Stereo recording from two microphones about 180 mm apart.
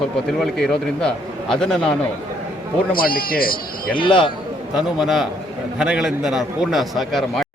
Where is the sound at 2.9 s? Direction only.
55° left (ahead or behind).